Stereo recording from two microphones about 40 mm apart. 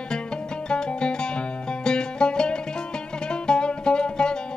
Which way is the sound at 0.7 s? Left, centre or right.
Left.